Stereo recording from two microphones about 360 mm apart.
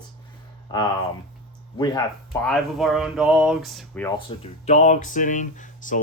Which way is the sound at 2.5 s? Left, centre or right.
Centre.